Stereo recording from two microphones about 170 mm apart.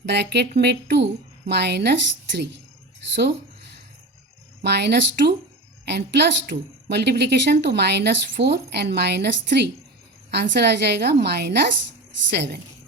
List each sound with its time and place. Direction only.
0.0 s a woman's voice: 80° right
3.2 s a sound: 80° right
4.6 s a woman's voice: 80° right